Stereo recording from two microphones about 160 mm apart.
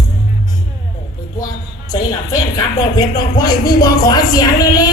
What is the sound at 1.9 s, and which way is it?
Speech, 25° left (ahead or behind).